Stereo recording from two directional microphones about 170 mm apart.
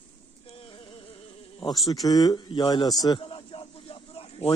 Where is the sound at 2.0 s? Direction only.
20° left (ahead or behind).